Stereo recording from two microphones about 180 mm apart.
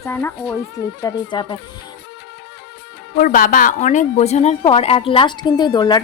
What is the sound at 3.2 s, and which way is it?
A woman's voice, 50° left (ahead or behind).